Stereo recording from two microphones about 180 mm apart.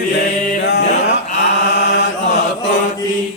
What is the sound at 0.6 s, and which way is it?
Music, 70° left (ahead or behind).